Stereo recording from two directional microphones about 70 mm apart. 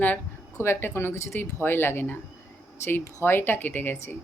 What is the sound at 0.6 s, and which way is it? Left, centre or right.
Speech, left.